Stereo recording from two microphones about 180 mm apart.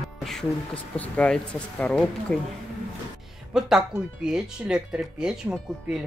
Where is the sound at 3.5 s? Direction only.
5° right (ahead or behind).